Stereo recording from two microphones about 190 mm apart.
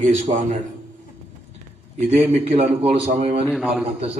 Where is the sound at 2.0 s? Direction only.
35° right (ahead or behind).